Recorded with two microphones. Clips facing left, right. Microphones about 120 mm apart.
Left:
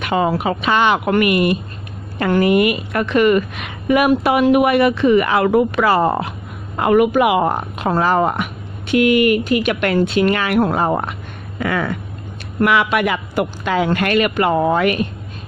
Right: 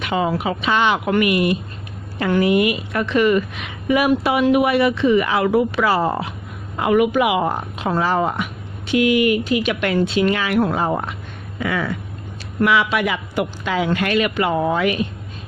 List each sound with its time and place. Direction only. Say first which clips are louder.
0.0 s a man's voice: left 3 dB; 50° left (ahead or behind)